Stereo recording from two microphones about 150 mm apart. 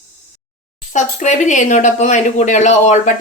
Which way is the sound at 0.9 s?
55° left (ahead or behind).